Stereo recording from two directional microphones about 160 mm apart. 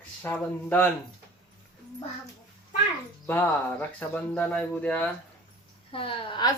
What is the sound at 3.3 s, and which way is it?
Speech, 15° left (ahead or behind).